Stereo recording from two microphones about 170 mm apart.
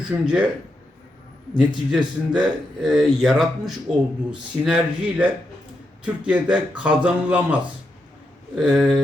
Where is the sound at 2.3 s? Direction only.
5° right (ahead or behind).